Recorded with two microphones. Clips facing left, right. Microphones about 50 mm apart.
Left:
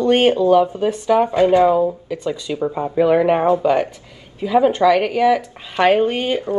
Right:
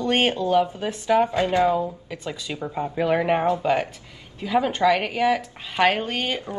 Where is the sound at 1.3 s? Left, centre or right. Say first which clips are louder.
Left 7 dB; left.